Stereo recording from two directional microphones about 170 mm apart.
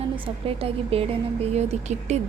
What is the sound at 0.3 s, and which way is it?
A woman's voice, 35° right (ahead or behind).